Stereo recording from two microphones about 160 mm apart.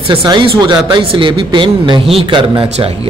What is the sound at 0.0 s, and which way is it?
Speech, 30° right (ahead or behind).